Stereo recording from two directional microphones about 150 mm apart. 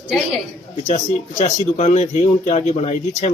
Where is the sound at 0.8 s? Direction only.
50° left (ahead or behind).